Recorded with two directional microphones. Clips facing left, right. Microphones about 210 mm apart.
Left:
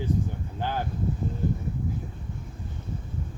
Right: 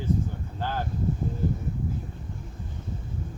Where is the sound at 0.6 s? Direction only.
15° left (ahead or behind).